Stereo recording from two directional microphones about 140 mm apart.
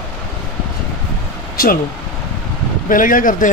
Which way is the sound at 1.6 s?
90° left.